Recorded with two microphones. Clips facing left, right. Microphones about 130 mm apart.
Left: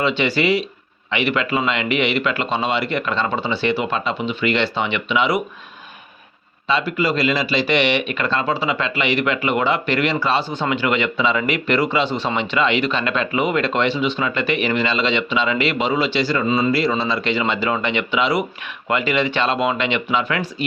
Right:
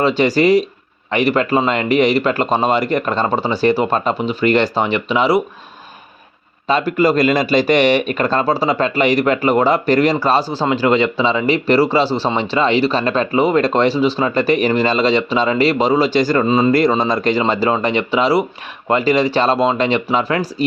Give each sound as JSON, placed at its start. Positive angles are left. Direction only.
{"t": 0.0, "sound": "speech", "side_deg": -40}
{"t": 6.7, "sound": "speech", "side_deg": -45}